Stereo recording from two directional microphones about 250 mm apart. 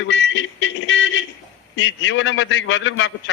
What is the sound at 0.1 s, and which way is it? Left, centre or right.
Music, left.